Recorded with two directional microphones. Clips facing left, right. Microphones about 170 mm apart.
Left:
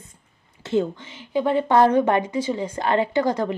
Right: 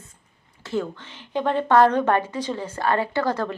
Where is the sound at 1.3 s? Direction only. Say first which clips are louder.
Left 1 dB; 10° left (ahead or behind).